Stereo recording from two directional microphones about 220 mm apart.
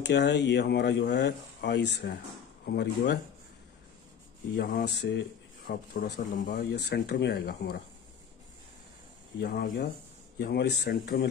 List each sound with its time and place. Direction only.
0.0 s speech: 50° left (ahead or behind)
4.5 s speech: 45° left (ahead or behind)
9.4 s speech: 50° left (ahead or behind)